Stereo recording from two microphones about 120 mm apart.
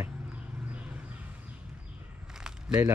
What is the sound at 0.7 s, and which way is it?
Vehicle, 10° right (ahead or behind).